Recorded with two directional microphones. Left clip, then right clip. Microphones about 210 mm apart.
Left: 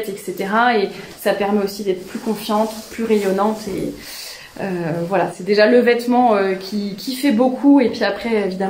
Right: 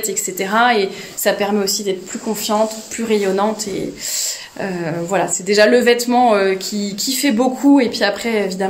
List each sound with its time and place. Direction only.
0.4 s a woman's voice: 40° right (ahead or behind)
3.1 s a woman's voice: 40° right (ahead or behind)
4.6 s a woman's voice: 40° right (ahead or behind)